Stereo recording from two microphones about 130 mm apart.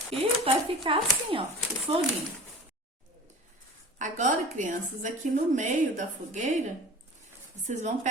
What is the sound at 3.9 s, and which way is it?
A woman's voice, 70° right (ahead or behind).